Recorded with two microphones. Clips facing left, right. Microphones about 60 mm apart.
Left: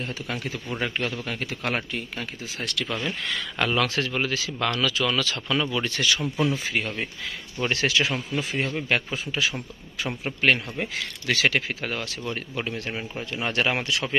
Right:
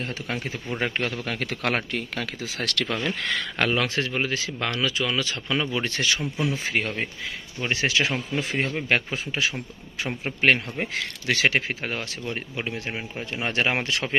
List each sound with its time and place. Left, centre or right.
0.0 s a man's voice: right
3.2 s a man's voice: right
3.7 s speech: right
7.7 s speech: right